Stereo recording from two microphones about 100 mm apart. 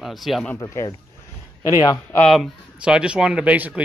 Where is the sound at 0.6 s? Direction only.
30° left (ahead or behind).